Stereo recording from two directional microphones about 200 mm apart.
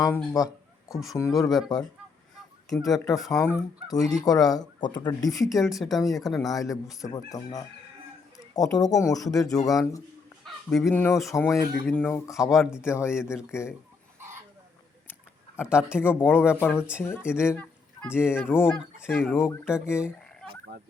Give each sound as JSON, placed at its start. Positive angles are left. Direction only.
{"t": 0.4, "sound": "speech", "side_deg": 15}
{"t": 0.9, "sound": "speech", "side_deg": 0}
{"t": 1.5, "sound": "speech", "side_deg": 20}
{"t": 5.5, "sound": "speech", "side_deg": 0}
{"t": 6.9, "sound": "speech", "side_deg": 15}
{"t": 10.4, "sound": "speech", "side_deg": 0}
{"t": 12.8, "sound": "speech", "side_deg": 15}
{"t": 15.6, "sound": "speech", "side_deg": -5}
{"t": 16.0, "sound": "speech", "side_deg": 10}
{"t": 16.4, "sound": "speech", "side_deg": -5}
{"t": 16.9, "sound": "speech", "side_deg": 10}
{"t": 18.9, "sound": "speech", "side_deg": -5}
{"t": 19.3, "sound": "speech", "side_deg": 10}
{"t": 19.9, "sound": "speech", "side_deg": -5}